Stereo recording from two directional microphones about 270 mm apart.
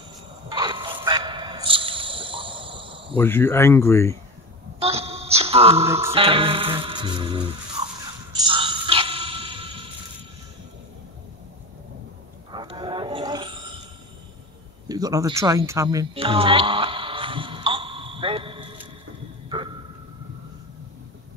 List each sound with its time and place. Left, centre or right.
0.5 s music: centre
3.2 s speech: centre
4.7 s a sound: right
5.9 s music: centre
6.1 s music: centre
8.3 s a sound: centre
12.4 s wild animals: centre
14.9 s music: centre